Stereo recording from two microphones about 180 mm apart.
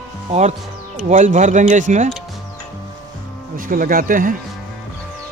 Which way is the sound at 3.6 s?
50° right (ahead or behind).